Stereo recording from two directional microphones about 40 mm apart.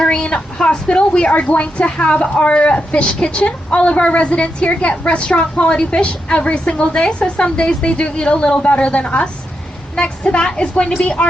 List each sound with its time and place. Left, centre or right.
0.0 s a woman's voice: left